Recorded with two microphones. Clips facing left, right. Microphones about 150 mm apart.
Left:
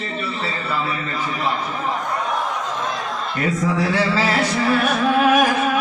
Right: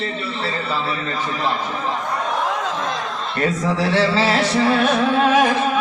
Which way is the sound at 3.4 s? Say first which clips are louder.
Right 1 dB; 30° right (ahead or behind).